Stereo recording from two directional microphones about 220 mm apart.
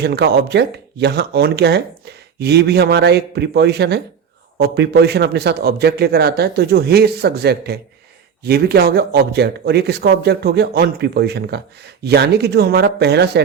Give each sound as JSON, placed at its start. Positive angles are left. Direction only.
{"t": 0.0, "sound": "a man's voice", "side_deg": -50}